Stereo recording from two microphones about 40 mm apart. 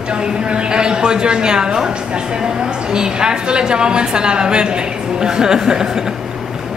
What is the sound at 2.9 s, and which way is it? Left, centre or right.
A woman's voice, centre.